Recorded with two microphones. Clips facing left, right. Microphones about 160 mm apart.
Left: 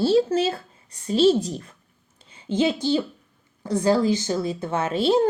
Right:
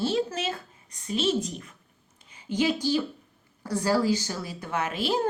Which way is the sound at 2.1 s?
30° left (ahead or behind).